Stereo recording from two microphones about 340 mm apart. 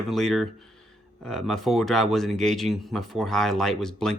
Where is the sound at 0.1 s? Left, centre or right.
Centre.